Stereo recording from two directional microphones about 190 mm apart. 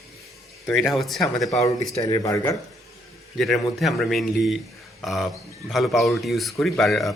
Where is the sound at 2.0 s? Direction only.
20° left (ahead or behind).